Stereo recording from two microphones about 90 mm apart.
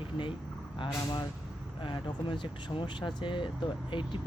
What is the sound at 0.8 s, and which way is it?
Speech, 55° left (ahead or behind).